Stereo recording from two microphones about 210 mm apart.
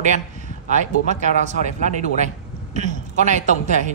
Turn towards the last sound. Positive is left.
turn(degrees=-35)  # may be behind; listen again after turning